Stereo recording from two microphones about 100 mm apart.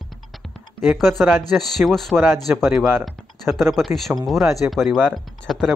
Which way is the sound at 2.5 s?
15° right (ahead or behind).